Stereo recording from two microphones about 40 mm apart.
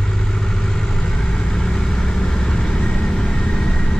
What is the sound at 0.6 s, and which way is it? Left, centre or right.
Vehicle, centre.